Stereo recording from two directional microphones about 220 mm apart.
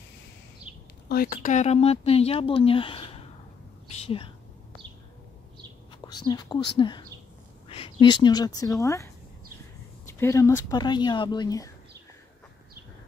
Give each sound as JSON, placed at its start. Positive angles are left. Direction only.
{"t": 0.7, "sound": "a sound", "side_deg": -5}
{"t": 1.0, "sound": "speech", "side_deg": 45}
{"t": 6.0, "sound": "speech", "side_deg": 20}